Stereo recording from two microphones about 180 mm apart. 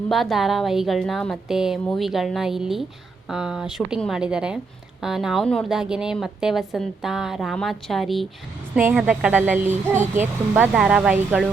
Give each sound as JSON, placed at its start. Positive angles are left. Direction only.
{"t": 0.1, "sound": "a woman's voice", "side_deg": 0}